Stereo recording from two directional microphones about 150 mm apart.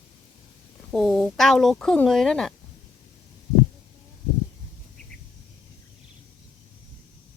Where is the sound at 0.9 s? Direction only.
Centre (ahead or behind).